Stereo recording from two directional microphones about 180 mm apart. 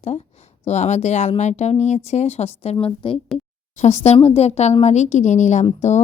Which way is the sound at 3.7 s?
40° left (ahead or behind).